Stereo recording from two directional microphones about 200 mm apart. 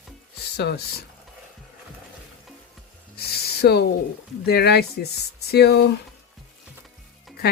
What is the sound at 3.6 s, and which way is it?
Speech, 55° left (ahead or behind).